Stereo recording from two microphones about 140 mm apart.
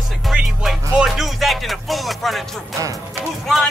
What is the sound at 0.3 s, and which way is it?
Music, 5° right (ahead or behind).